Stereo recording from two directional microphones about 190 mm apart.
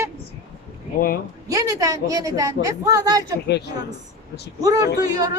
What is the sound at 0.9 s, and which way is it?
Speech, 50° left (ahead or behind).